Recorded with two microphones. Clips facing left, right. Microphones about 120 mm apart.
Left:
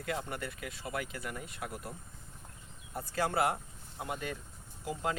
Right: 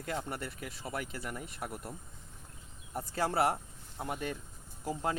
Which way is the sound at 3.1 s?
35° right (ahead or behind).